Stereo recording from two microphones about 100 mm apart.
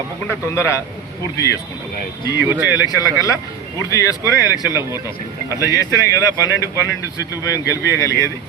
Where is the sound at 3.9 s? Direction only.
35° left (ahead or behind).